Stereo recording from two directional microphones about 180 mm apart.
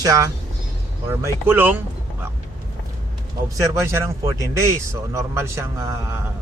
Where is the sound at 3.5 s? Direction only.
15° right (ahead or behind).